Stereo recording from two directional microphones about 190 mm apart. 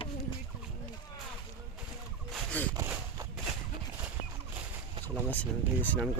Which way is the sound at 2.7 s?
15° right (ahead or behind).